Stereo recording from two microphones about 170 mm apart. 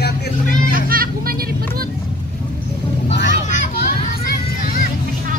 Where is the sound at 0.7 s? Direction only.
55° right (ahead or behind).